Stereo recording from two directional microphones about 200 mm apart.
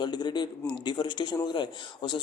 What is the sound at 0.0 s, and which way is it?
Speech, 20° left (ahead or behind).